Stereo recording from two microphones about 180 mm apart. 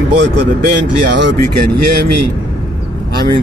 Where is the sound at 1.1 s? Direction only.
75° right (ahead or behind).